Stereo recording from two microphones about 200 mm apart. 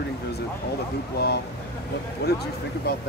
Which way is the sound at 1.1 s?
55° left (ahead or behind).